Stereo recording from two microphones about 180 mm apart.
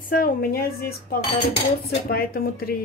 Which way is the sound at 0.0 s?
55° left (ahead or behind).